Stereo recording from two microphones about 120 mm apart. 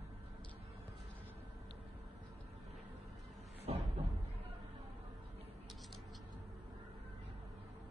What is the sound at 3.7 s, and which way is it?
Cupboard open or close, 60° right (ahead or behind).